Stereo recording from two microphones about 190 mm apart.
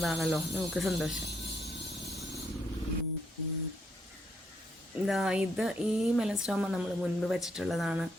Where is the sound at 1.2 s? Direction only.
60° left (ahead or behind).